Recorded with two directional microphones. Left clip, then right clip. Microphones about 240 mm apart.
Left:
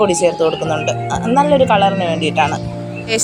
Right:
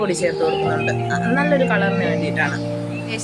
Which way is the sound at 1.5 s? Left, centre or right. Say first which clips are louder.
Left 7 dB; centre.